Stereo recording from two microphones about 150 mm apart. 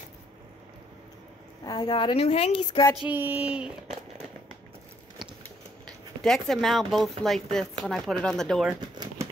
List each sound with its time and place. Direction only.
1.6 s a woman's voice: 25° left (ahead or behind)
3.0 s speech: 10° right (ahead or behind)
5.9 s speech: 5° left (ahead or behind)
8.9 s a sound: 30° right (ahead or behind)